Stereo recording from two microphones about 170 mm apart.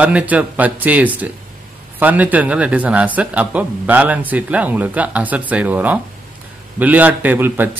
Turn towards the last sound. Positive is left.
turn(degrees=-10)  # may be behind; listen again after turning